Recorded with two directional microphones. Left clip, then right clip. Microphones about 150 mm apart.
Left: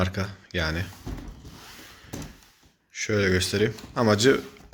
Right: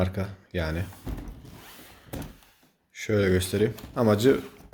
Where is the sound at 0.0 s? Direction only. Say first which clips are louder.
Left 1 dB; 5° right (ahead or behind).